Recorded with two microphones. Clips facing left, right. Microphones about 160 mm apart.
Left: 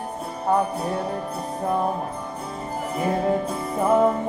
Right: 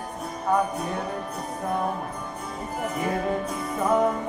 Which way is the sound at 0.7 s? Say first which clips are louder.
Left 3 dB; 30° left (ahead or behind).